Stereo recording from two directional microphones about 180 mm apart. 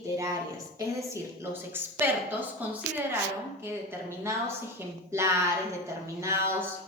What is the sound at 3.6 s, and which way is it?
A woman's voice, 15° right (ahead or behind).